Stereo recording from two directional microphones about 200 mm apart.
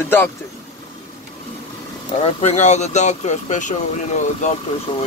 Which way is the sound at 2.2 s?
35° left (ahead or behind).